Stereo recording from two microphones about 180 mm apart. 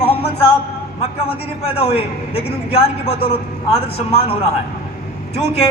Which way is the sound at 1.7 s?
35° left (ahead or behind).